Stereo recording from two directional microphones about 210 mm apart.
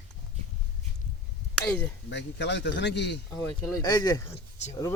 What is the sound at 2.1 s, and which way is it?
A man's voice, 55° left (ahead or behind).